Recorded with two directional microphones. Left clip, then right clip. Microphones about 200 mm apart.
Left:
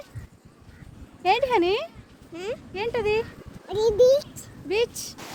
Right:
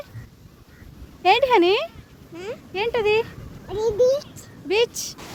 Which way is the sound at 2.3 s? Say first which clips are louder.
Left 1 dB; 40° left (ahead or behind).